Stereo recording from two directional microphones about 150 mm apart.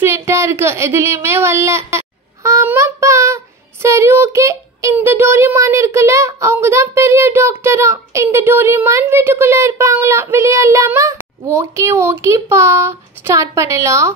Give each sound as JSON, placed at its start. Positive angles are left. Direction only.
{"t": 0.0, "sound": "speech", "side_deg": -15}